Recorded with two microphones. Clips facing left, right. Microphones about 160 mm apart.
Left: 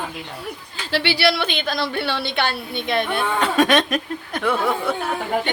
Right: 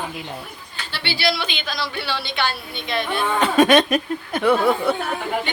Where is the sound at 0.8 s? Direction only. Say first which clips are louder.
Left 4 dB; 90° left; by 3.2 s 55° left (ahead or behind).